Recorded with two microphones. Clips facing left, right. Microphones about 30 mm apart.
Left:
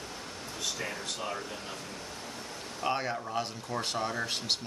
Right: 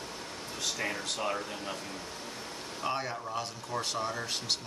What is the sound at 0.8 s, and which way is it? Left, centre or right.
Speech, right.